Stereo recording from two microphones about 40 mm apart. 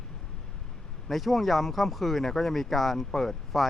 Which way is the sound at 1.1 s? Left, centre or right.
Centre.